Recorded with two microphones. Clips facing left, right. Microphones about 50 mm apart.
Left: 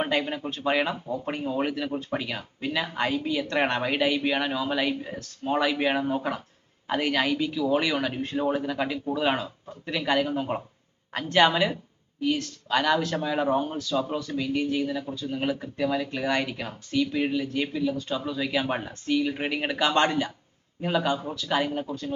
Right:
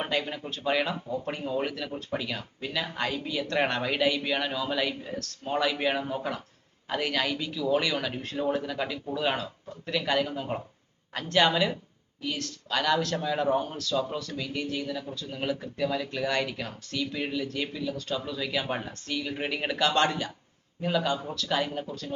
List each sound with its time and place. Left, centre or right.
0.0 s speech: left